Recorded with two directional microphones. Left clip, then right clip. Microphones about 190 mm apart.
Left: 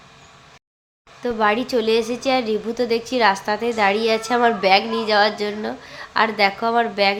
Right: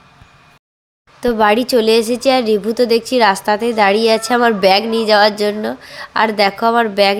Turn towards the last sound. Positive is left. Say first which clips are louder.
# right 6 dB
turn(degrees=-35)  # may be behind; listen again after turning